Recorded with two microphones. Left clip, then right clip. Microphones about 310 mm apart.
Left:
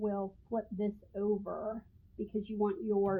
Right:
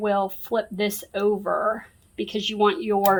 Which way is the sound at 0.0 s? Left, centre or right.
Right.